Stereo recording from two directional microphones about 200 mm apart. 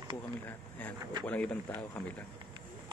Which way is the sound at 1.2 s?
5° left (ahead or behind).